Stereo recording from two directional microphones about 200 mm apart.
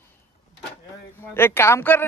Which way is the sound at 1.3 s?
10° left (ahead or behind).